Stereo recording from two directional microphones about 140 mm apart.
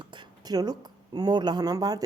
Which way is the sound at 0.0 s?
35° right (ahead or behind).